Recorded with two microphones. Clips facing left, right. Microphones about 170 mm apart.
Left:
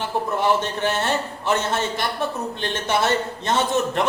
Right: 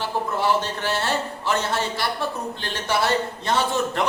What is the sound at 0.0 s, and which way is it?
A man's voice, 20° left (ahead or behind).